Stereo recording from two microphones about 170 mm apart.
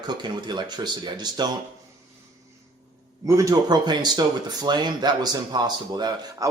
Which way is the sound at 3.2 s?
20° right (ahead or behind).